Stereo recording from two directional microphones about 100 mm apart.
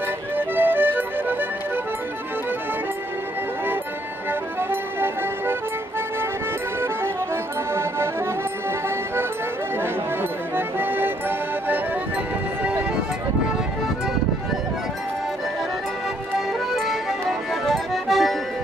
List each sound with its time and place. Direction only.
0.4 s music: 20° right (ahead or behind)
4.3 s music: 20° right (ahead or behind)
10.5 s music: 20° right (ahead or behind)
16.3 s accordion: centre (ahead or behind)